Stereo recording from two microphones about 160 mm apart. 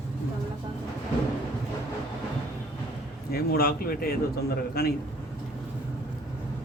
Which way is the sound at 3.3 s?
70° left (ahead or behind).